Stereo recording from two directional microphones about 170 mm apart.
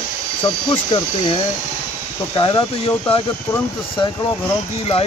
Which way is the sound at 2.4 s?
30° left (ahead or behind).